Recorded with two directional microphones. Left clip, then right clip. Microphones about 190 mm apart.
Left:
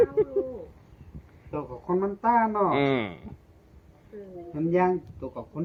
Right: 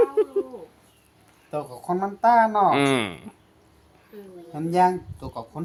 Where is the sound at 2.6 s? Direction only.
35° right (ahead or behind).